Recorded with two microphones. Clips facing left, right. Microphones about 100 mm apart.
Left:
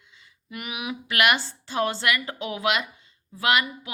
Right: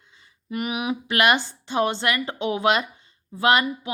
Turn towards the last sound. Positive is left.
turn(degrees=-30)  # may be behind; listen again after turning